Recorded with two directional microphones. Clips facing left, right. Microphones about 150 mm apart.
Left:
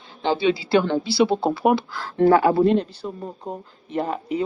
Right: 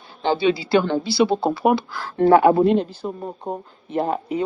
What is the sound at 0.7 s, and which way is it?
Speech, 35° right (ahead or behind).